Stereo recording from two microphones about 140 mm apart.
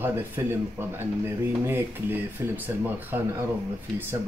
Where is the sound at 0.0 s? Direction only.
15° right (ahead or behind).